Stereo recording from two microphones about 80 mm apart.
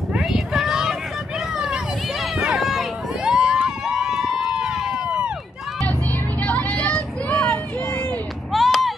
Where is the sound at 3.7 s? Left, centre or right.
Centre.